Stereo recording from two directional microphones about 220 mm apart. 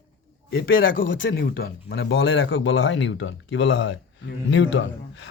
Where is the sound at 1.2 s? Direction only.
50° left (ahead or behind).